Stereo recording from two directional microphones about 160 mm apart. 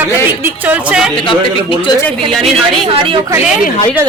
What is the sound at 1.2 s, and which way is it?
Speech, 30° left (ahead or behind).